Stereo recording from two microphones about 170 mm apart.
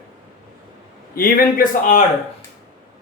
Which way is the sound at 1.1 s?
60° left (ahead or behind).